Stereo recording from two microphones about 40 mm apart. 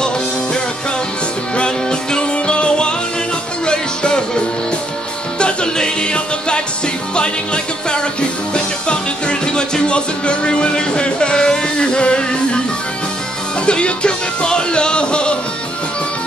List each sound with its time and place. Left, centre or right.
1.6 s music: left
5.4 s music: left
13.7 s music: left